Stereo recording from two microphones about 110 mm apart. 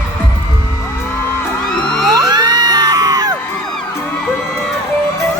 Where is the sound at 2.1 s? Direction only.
35° right (ahead or behind).